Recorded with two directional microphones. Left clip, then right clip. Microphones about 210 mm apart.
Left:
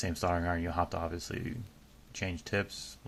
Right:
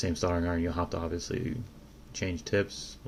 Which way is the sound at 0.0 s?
40° left (ahead or behind).